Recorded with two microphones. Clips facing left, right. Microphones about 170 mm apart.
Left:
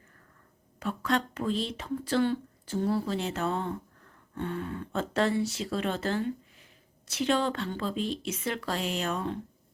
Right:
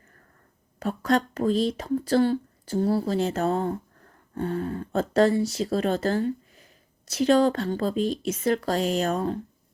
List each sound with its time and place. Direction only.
0.8 s speech: 40° right (ahead or behind)